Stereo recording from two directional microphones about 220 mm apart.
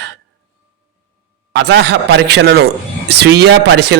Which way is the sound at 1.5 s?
50° right (ahead or behind).